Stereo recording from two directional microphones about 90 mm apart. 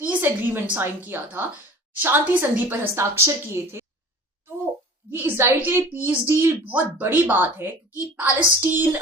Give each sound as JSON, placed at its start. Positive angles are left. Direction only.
{"t": 0.0, "sound": "a woman's voice", "side_deg": -20}
{"t": 5.1, "sound": "a woman's voice", "side_deg": -25}